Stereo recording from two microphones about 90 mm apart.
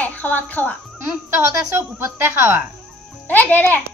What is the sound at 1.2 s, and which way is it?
A woman's voice, 25° right (ahead or behind).